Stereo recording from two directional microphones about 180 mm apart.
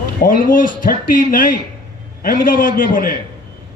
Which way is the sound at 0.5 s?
50° left (ahead or behind).